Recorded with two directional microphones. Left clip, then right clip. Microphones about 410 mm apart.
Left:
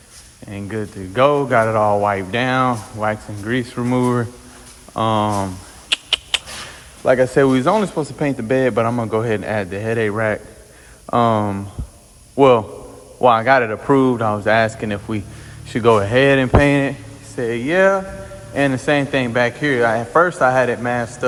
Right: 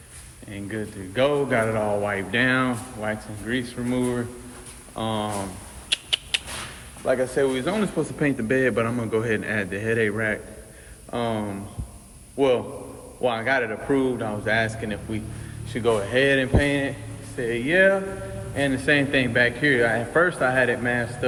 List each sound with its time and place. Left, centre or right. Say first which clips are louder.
0.5 s speech: left 5 dB; centre
5.9 s a sound: left 6 dB; centre
7.0 s speech: left 8 dB; left